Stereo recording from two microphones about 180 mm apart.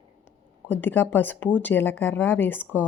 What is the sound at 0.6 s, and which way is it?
Speech, 10° left (ahead or behind).